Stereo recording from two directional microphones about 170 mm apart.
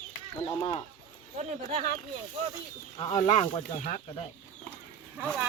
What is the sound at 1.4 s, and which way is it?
Speech, 40° right (ahead or behind).